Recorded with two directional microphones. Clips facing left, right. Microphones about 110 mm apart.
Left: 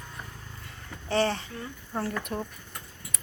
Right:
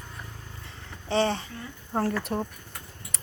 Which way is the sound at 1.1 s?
20° right (ahead or behind).